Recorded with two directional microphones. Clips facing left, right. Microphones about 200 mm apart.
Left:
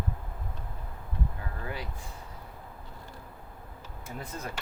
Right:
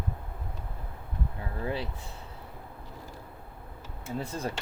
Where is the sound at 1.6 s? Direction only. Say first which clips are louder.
Right 6 dB; 25° right (ahead or behind).